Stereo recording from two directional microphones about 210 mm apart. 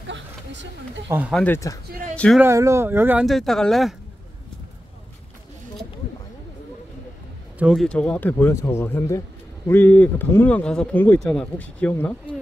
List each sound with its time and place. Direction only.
0.0 s a sound: 60° right (ahead or behind)
1.3 s speech: 10° left (ahead or behind)
2.4 s speech: 15° right (ahead or behind)
7.5 s speech: centre (ahead or behind)